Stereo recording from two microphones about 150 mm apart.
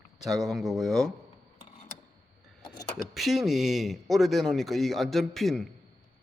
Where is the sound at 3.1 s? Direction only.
Centre (ahead or behind).